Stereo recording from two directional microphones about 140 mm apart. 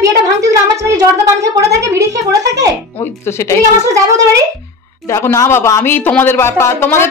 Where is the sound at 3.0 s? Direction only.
20° left (ahead or behind).